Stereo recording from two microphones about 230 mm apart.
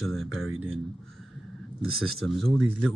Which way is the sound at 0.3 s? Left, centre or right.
Right.